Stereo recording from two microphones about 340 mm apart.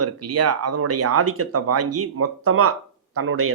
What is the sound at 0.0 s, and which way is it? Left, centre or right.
A woman's voice, right.